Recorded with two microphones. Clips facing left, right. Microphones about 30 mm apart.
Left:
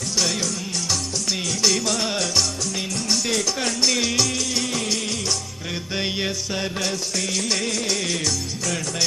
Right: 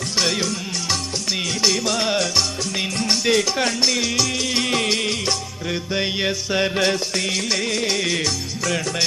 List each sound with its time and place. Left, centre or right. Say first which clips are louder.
0.2 s music: right 3 dB; right
1.6 s music: right 1 dB; centre
3.8 s music: right 1 dB; centre
4.4 s music: right 4 dB; right
5.9 s music: right 3 dB; centre
6.6 s music: right 9 dB; right
7.4 s music: right 2 dB; centre
7.7 s music: right 3 dB; right